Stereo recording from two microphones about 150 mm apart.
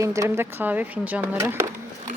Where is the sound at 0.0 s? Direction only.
20° right (ahead or behind).